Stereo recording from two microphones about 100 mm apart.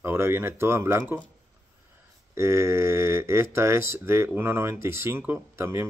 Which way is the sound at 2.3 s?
25° right (ahead or behind).